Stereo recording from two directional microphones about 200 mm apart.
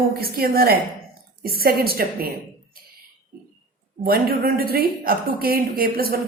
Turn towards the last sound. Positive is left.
turn(degrees=-50)  # may be behind; listen again after turning